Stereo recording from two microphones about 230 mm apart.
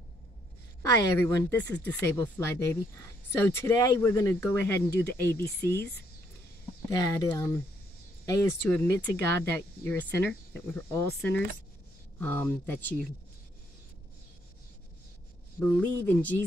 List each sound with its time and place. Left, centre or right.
0.8 s speech: centre
7.2 s speech: centre
15.6 s speech: centre